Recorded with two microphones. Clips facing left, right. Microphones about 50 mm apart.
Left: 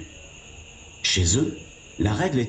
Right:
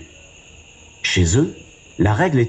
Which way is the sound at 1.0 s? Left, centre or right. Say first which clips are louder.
Right 6 dB; right.